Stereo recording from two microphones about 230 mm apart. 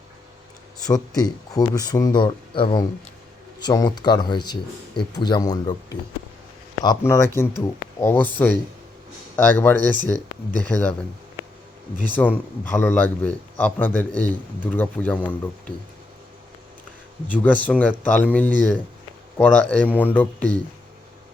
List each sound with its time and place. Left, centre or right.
0.9 s speech: centre
9.3 s speech: centre
12.0 s speech: centre
17.4 s speech: centre